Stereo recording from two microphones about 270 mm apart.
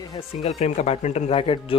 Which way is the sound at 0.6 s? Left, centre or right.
Left.